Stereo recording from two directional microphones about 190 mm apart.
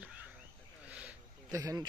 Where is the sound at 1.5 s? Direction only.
20° right (ahead or behind).